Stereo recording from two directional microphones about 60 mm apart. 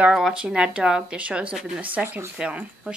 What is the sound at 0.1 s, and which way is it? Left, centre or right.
Speech, centre.